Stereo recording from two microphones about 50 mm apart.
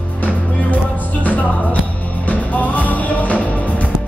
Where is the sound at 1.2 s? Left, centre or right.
Left.